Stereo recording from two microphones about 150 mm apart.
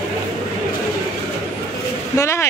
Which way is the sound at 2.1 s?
20° left (ahead or behind).